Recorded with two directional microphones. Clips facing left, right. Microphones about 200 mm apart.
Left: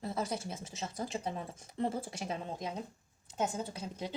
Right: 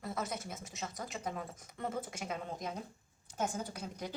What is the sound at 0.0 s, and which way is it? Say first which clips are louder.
Speech: left 3 dB; 30° left (ahead or behind).